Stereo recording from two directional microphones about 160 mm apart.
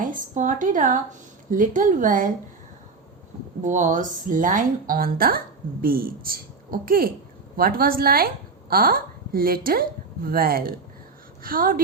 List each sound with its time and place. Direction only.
0.0 s a woman's voice: 55° right (ahead or behind)
3.6 s a woman's voice: 50° right (ahead or behind)